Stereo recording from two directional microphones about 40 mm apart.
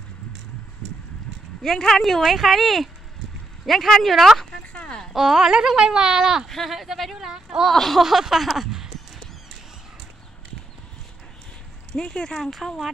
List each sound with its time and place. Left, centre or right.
1.6 s speech: centre
5.1 s speech: centre
6.4 s speech: centre
7.6 s speech: centre
8.0 s speech: centre
8.5 s a sound: centre
11.9 s speech: left
12.4 s speech: centre